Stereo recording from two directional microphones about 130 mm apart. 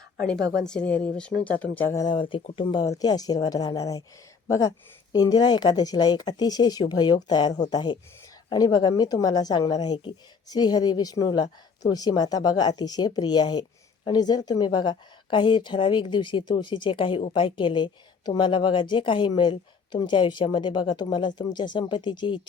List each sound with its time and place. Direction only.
0.3 s speech: 5° left (ahead or behind)
2.0 s speech: 40° left (ahead or behind)
2.8 s speech: 30° left (ahead or behind)
5.1 s speech: 30° left (ahead or behind)